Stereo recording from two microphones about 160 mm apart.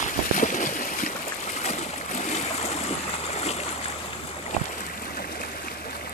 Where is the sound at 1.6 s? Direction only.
45° left (ahead or behind).